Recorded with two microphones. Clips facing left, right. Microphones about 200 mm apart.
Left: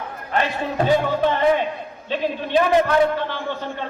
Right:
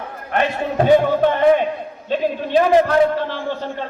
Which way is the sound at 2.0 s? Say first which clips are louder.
Right 3 dB; 40° right (ahead or behind).